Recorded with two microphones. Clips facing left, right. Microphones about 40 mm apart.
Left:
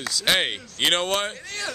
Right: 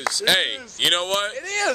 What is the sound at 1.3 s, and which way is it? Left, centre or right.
Speech, right.